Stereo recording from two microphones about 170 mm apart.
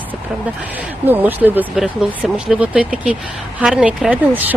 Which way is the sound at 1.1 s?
10° right (ahead or behind).